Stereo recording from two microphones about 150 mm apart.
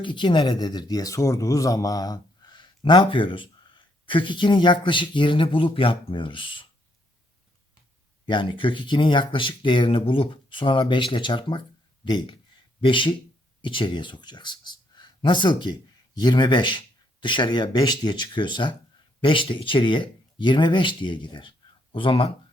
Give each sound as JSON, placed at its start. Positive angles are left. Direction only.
{"t": 0.0, "sound": "speech", "side_deg": 30}
{"t": 8.3, "sound": "speech", "side_deg": 35}